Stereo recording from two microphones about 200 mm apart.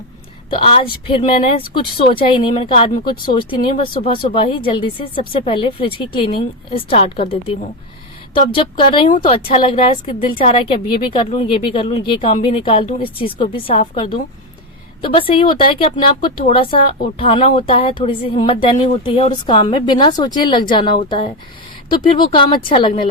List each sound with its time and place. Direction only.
0.5 s speech: 25° left (ahead or behind)